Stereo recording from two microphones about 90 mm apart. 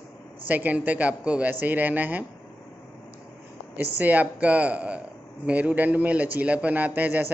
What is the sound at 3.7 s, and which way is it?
A man's voice, 20° right (ahead or behind).